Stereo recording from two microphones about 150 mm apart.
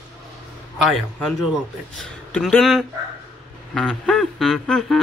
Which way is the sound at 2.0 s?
5° left (ahead or behind).